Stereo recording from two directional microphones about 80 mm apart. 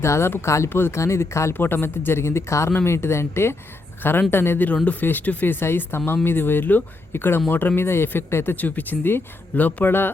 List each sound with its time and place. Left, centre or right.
0.0 s speech: left